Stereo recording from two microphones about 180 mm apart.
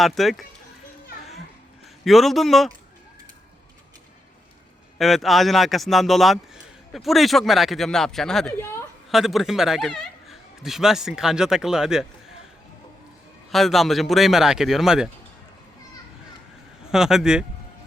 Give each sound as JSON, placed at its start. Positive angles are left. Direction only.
{"t": 0.0, "sound": "speech", "side_deg": 0}
{"t": 2.0, "sound": "speech", "side_deg": 0}
{"t": 4.9, "sound": "speech", "side_deg": 0}
{"t": 8.5, "sound": "a woman's voice", "side_deg": 15}
{"t": 9.0, "sound": "speech", "side_deg": 0}
{"t": 13.5, "sound": "speech", "side_deg": 0}
{"t": 16.9, "sound": "speech", "side_deg": -5}